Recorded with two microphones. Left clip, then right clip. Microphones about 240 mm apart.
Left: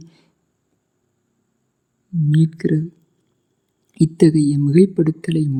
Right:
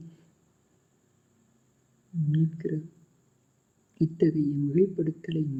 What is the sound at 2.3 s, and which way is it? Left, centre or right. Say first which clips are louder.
Speech: left 12 dB; left.